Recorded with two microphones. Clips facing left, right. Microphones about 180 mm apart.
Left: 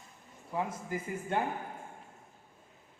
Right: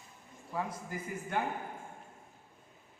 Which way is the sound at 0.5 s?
20° left (ahead or behind).